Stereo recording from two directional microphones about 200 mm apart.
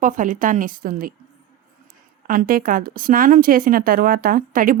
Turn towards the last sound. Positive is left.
turn(degrees=-45)  # may be behind; listen again after turning